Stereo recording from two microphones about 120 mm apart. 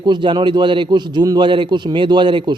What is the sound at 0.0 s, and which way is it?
A man's voice, 40° right (ahead or behind).